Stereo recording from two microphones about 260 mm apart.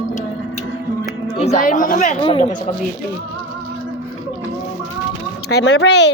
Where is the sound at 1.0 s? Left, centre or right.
Left.